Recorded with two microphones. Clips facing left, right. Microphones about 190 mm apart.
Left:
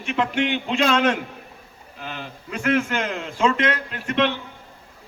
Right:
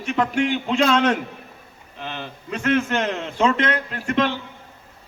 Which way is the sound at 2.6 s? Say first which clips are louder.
Right 1 dB; 30° right (ahead or behind).